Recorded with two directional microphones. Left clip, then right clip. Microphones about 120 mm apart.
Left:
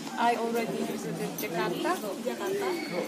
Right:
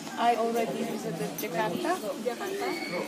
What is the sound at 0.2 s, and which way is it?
Speech, 20° right (ahead or behind).